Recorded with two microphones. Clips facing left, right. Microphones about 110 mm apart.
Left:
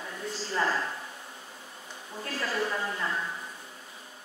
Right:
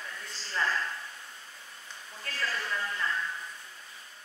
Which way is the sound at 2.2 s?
20° left (ahead or behind).